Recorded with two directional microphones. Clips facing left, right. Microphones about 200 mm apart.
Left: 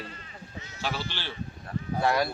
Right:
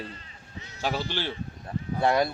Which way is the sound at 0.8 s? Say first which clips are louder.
Right 5 dB; 15° right (ahead or behind).